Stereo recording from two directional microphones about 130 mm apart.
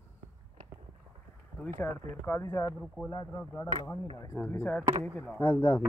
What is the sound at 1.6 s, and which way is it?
Speech, 15° left (ahead or behind).